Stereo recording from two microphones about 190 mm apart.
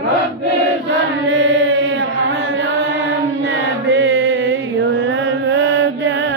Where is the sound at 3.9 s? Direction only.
75° right (ahead or behind).